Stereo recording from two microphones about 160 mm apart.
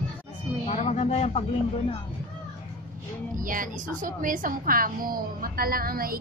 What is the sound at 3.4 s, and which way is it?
A woman's voice, 60° right (ahead or behind).